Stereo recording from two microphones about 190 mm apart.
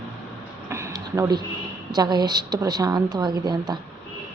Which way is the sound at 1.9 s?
20° right (ahead or behind).